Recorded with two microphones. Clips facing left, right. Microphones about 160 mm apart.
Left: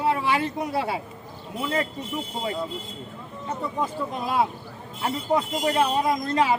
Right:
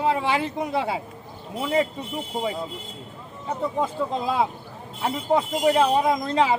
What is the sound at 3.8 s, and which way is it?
Speech, 25° right (ahead or behind).